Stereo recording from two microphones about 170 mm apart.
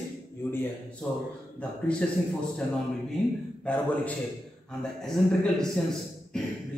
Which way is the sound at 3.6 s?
10° left (ahead or behind).